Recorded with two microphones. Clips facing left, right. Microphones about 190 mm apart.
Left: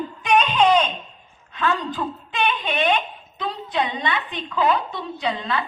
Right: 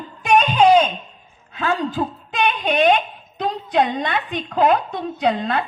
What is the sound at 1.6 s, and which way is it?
A woman's voice, 45° right (ahead or behind).